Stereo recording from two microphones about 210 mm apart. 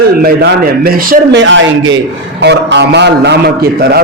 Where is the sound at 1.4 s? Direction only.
60° right (ahead or behind).